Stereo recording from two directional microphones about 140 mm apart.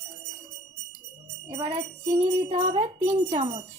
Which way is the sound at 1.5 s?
45° right (ahead or behind).